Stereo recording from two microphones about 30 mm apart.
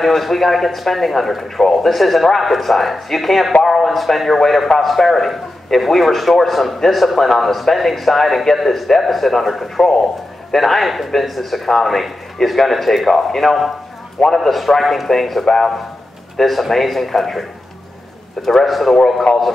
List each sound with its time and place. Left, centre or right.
0.0 s a man's voice: centre
18.7 s a man's voice: centre
19.3 s speech: left